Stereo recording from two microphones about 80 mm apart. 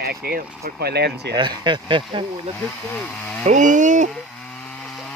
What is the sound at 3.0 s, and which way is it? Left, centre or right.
Speech, left.